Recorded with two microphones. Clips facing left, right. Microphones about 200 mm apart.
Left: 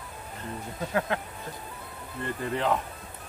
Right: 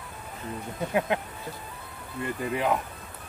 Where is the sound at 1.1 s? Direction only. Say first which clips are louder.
Right 2 dB; 20° right (ahead or behind).